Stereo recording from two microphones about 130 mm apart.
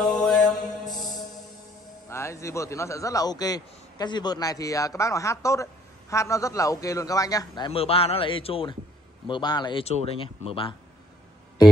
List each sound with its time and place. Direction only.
0.0 s mantra: 5° left (ahead or behind)
0.8 s music: centre (ahead or behind)
2.0 s a man's voice: 20° left (ahead or behind)
7.8 s speech: 45° left (ahead or behind)
9.8 s speech: 50° left (ahead or behind)